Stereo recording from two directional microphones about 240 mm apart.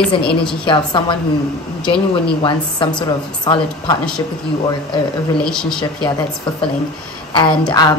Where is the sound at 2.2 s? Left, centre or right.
Left.